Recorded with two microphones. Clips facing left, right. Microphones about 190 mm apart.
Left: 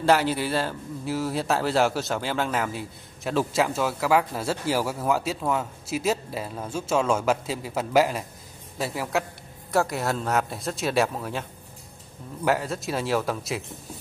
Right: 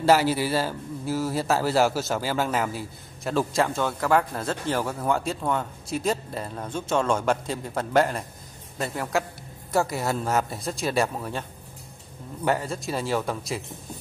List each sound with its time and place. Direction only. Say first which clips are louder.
0.0 s a man's voice: right 1 dB; 5° right (ahead or behind)
12.4 s a man's voice: left 1 dB; centre (ahead or behind)